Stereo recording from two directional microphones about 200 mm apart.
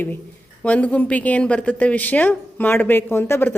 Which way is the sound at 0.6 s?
5° left (ahead or behind).